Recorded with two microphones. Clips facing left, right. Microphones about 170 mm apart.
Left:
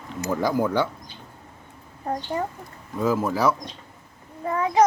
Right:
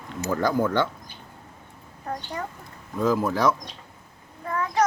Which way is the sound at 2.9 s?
5° left (ahead or behind).